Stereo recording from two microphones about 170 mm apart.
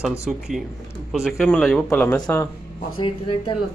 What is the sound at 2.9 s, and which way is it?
Speech, 30° left (ahead or behind).